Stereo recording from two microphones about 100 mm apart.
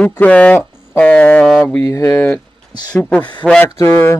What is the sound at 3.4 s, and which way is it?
Speech, 5° right (ahead or behind).